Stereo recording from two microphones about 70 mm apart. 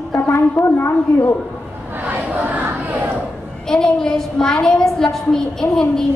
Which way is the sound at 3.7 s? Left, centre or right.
Centre.